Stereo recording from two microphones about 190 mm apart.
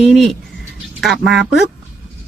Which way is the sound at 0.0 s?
Centre (ahead or behind).